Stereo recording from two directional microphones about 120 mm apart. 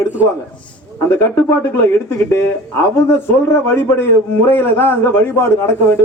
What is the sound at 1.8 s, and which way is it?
A man's voice, 20° left (ahead or behind).